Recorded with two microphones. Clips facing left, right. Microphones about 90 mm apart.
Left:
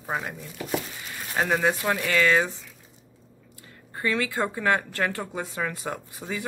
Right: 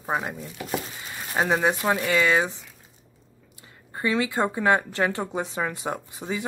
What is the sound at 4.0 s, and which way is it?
A woman's voice, 20° right (ahead or behind).